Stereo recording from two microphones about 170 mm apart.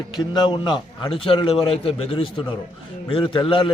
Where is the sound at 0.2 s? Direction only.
30° left (ahead or behind).